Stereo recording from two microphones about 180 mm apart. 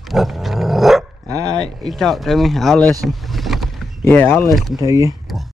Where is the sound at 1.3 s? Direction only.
20° right (ahead or behind).